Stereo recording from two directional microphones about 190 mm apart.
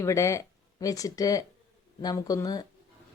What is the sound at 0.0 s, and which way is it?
A woman's voice, 15° left (ahead or behind).